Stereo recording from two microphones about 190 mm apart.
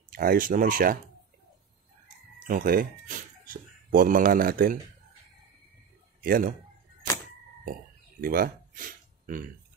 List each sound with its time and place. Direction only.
0.1 s speech: 50° right (ahead or behind)
2.4 s speech: 50° right (ahead or behind)
6.2 s speech: 50° right (ahead or behind)
8.2 s speech: 50° right (ahead or behind)